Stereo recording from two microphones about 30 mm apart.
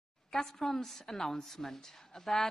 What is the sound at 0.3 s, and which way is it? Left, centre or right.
A woman's voice, centre.